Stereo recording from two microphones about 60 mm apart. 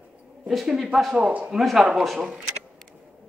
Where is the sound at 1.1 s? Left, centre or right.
Centre.